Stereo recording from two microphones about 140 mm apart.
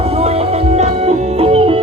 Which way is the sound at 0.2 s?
45° right (ahead or behind).